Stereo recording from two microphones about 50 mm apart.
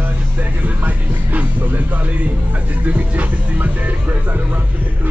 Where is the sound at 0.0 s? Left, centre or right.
Right.